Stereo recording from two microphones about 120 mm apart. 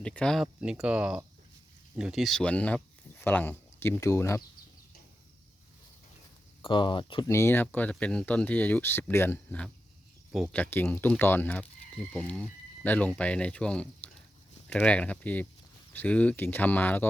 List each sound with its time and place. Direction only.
0.0 s speech: 10° left (ahead or behind)
0.6 s speech: 5° right (ahead or behind); by 4.4 s 25° left (ahead or behind)
6.6 s speech: 45° left (ahead or behind)
7.3 s speech: 20° left (ahead or behind)